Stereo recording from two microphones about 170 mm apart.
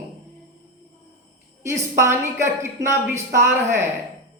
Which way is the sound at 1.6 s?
15° right (ahead or behind).